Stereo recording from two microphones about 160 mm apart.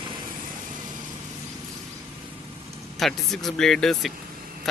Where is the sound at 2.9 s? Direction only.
Centre (ahead or behind).